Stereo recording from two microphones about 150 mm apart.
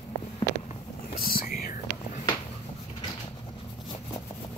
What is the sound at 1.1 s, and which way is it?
Whispering, 75° left (ahead or behind).